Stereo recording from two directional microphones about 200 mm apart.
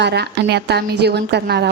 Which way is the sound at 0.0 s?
55° right (ahead or behind).